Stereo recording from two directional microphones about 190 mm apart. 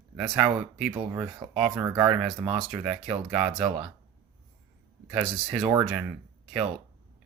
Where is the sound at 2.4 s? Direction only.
30° right (ahead or behind).